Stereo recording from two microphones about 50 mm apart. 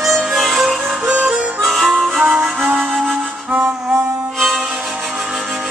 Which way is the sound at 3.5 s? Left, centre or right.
Right.